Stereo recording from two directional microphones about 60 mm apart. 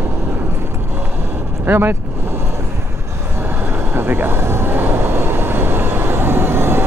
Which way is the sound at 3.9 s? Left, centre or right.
Right.